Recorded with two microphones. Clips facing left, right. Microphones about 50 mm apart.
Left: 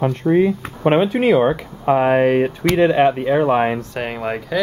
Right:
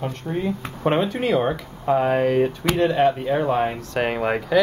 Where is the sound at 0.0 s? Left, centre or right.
Left.